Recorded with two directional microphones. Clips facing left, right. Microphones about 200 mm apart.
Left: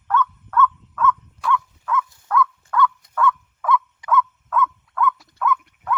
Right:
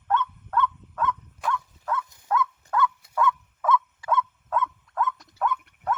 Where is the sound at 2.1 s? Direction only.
25° right (ahead or behind).